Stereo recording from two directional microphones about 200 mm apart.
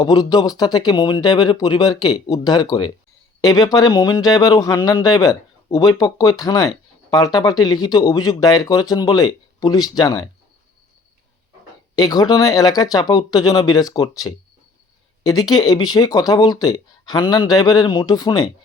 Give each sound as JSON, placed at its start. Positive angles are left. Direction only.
{"t": 0.0, "sound": "speech", "side_deg": 20}
{"t": 11.9, "sound": "speech", "side_deg": 20}